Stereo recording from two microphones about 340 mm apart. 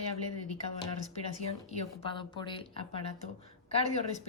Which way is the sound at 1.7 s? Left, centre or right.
Centre.